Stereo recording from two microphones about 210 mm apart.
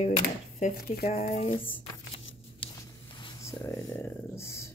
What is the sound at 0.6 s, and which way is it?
Speech, 40° left (ahead or behind).